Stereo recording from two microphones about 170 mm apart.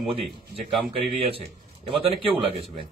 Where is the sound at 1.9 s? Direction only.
30° right (ahead or behind).